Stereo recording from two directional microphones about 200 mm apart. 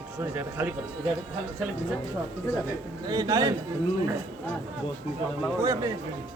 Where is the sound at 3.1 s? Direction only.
20° right (ahead or behind).